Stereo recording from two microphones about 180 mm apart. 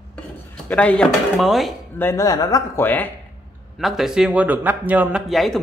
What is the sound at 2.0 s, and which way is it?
Speech, 15° left (ahead or behind).